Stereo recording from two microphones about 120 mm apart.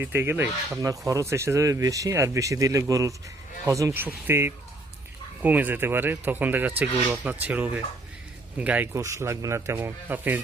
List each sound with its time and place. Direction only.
0.0 s speech: 20° right (ahead or behind)
9.0 s speech: 25° right (ahead or behind)